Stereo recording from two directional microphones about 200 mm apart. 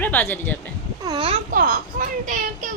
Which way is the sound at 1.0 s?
25° right (ahead or behind).